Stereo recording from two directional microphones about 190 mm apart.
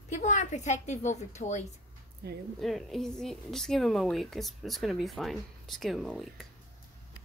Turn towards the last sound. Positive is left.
turn(degrees=0)  # may be behind; listen again after turning